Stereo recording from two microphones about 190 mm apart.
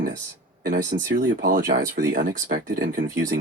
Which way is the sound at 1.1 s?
60° right (ahead or behind).